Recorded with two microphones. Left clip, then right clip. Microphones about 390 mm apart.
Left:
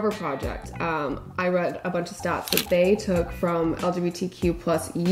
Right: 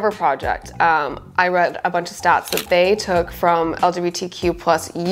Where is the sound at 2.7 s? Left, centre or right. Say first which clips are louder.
Right 6 dB; right.